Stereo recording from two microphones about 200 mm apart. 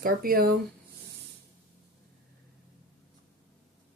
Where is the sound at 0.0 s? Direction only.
45° right (ahead or behind).